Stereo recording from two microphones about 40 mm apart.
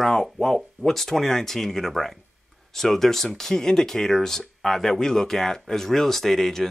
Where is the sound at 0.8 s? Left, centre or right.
Centre.